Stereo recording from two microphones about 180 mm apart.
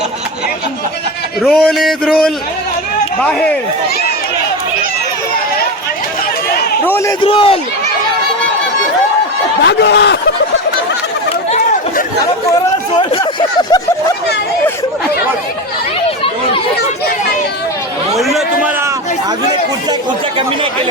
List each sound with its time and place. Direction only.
1.4 s a man's voice: centre (ahead or behind)
6.8 s a sound: 15° left (ahead or behind)
7.2 s a man's voice: 30° left (ahead or behind)
9.6 s speech: 65° left (ahead or behind)
11.5 s chatter: 45° left (ahead or behind)
13.0 s speech: 25° left (ahead or behind)
16.0 s chatter: 30° left (ahead or behind)
18.2 s a man's voice: centre (ahead or behind)